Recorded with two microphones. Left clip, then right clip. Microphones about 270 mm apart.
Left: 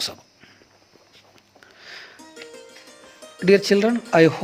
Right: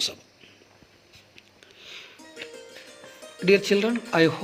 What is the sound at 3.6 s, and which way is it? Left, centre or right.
Speech, left.